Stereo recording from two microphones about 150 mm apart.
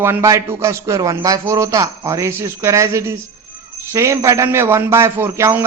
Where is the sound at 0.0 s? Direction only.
15° right (ahead or behind).